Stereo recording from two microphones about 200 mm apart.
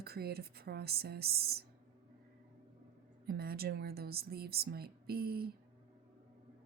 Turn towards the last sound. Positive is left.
turn(degrees=-50)  # may be behind; listen again after turning